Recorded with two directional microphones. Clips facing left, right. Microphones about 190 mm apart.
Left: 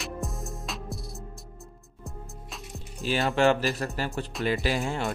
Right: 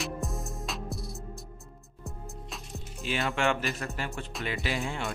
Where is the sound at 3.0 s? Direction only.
40° left (ahead or behind).